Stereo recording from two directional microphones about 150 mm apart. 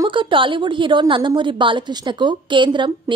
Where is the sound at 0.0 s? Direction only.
35° right (ahead or behind).